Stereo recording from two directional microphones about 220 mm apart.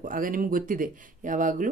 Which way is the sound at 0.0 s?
40° right (ahead or behind).